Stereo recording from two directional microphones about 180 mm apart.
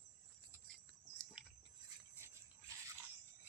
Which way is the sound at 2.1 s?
15° right (ahead or behind).